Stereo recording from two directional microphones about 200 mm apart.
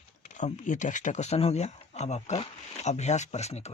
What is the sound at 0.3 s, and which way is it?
Speech, 35° left (ahead or behind).